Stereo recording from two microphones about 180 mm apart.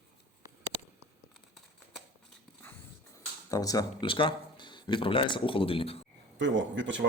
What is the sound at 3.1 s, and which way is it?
Speech, 20° left (ahead or behind).